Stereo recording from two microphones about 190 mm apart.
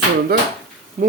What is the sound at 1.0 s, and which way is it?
Speech, 45° right (ahead or behind).